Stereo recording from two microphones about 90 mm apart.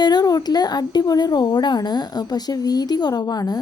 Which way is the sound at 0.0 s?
50° left (ahead or behind).